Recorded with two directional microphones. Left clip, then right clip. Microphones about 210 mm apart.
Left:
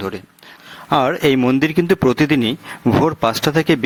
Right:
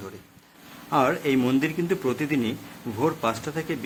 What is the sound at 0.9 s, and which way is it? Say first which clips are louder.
Speech: left 7 dB; 40° left (ahead or behind).